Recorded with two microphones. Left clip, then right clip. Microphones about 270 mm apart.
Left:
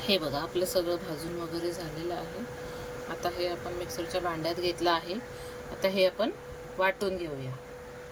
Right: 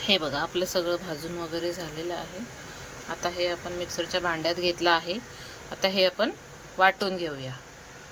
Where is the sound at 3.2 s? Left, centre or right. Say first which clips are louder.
Right 4 dB; centre.